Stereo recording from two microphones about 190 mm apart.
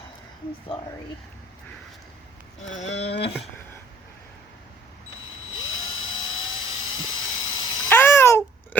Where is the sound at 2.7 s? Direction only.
35° left (ahead or behind).